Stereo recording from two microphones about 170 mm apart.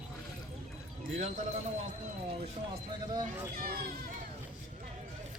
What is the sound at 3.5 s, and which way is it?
Speech, 60° right (ahead or behind).